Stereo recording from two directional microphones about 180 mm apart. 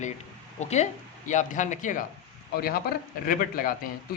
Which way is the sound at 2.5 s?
55° left (ahead or behind).